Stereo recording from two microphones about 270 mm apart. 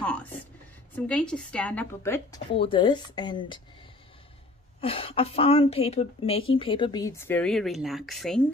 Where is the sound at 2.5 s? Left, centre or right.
Centre.